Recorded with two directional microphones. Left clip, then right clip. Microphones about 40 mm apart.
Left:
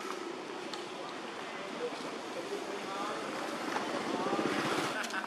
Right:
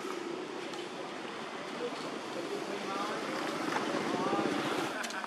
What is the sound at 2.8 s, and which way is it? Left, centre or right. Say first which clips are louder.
Vehicle: right 2 dB; right.